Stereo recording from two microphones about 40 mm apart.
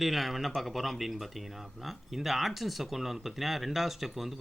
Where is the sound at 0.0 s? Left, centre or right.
Centre.